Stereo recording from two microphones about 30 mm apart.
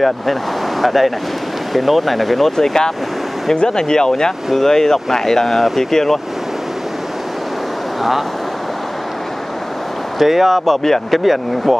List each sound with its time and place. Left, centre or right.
0.0 s speech: centre
2.5 s speech: centre
10.1 s speech: centre